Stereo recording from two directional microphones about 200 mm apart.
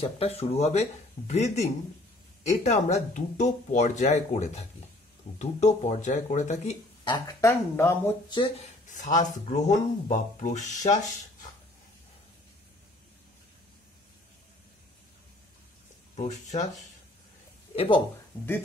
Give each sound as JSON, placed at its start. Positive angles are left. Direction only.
{"t": 0.0, "sound": "speech", "side_deg": 30}
{"t": 7.2, "sound": "speech", "side_deg": 15}
{"t": 8.4, "sound": "speech", "side_deg": 30}
{"t": 16.2, "sound": "speech", "side_deg": 35}
{"t": 17.7, "sound": "speech", "side_deg": 25}